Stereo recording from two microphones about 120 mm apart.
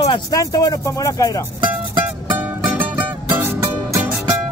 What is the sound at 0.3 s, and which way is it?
Speech, 30° left (ahead or behind).